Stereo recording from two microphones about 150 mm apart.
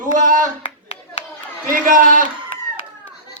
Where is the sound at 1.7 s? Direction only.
65° right (ahead or behind).